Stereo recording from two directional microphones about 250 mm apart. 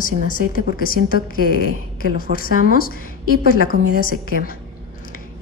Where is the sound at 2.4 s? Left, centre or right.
Left.